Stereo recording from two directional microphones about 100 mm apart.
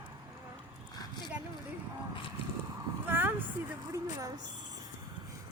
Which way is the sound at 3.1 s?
20° right (ahead or behind).